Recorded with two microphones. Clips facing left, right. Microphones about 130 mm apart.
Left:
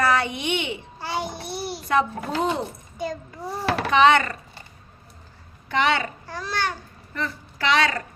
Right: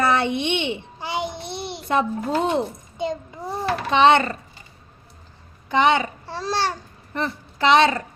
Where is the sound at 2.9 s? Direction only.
25° right (ahead or behind).